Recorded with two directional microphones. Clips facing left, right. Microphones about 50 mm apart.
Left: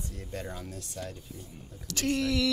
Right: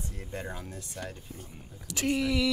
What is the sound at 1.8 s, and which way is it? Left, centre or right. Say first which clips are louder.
Speech: even; centre.